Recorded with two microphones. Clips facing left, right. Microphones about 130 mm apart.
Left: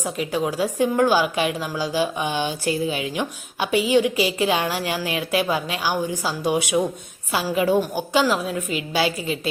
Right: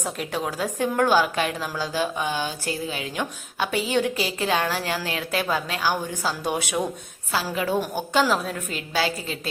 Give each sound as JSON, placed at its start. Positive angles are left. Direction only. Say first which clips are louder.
{"t": 0.0, "sound": "a woman's voice", "louder": "left 4 dB", "side_deg": 0}
{"t": 7.8, "sound": "a woman's voice", "louder": "left 2 dB", "side_deg": 5}